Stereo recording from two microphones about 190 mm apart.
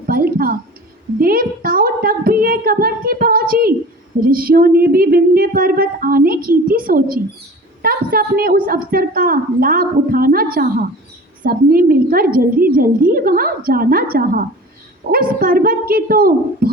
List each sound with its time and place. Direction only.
0.1 s a woman's voice: 50° right (ahead or behind)